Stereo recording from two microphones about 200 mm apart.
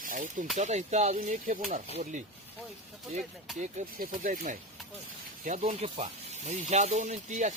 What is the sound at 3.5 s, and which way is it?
Speech, 40° right (ahead or behind).